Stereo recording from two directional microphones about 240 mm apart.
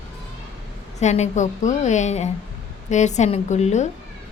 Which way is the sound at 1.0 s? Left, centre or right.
Left.